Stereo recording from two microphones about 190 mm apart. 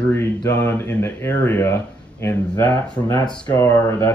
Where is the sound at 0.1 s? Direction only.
15° left (ahead or behind).